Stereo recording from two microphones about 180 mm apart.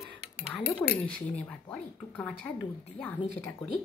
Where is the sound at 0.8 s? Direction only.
10° left (ahead or behind).